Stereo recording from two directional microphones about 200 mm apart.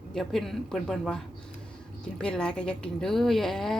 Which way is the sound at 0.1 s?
Centre (ahead or behind).